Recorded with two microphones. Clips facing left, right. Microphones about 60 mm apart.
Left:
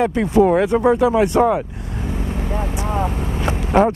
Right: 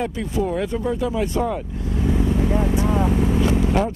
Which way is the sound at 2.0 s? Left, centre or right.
Left.